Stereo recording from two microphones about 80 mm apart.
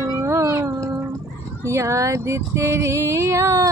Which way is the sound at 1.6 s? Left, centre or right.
Right.